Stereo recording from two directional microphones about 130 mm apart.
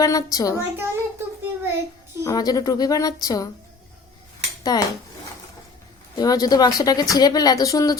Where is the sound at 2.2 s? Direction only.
30° left (ahead or behind).